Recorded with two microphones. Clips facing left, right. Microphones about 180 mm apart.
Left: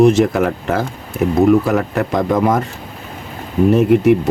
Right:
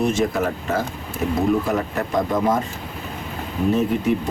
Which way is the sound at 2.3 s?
70° left (ahead or behind).